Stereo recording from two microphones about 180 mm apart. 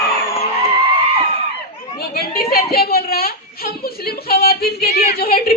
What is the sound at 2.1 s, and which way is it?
A woman's voice, 60° left (ahead or behind).